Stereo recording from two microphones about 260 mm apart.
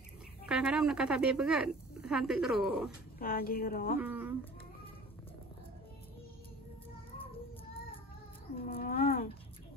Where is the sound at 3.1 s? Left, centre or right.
Left.